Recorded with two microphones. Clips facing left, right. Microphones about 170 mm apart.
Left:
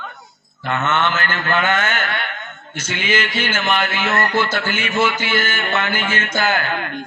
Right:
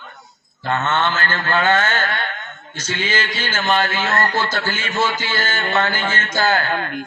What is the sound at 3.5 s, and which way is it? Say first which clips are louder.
A man's voice: right 3 dB; 30° right (ahead or behind).